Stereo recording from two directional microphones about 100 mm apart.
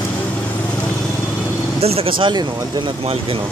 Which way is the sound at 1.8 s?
85° right.